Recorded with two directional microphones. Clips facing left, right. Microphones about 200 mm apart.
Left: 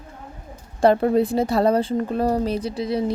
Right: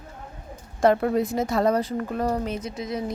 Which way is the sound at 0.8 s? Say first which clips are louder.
Left 3 dB; 30° left (ahead or behind).